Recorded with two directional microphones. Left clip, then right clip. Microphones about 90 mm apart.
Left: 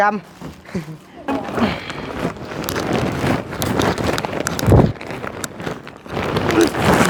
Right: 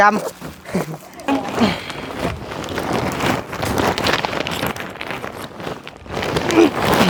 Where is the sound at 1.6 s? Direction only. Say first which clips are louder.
Right 2 dB; 35° right (ahead or behind).